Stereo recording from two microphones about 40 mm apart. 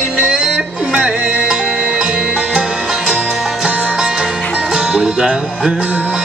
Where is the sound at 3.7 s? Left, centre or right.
Right.